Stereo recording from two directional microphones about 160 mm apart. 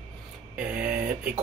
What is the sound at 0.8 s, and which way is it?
Speech, 60° right (ahead or behind).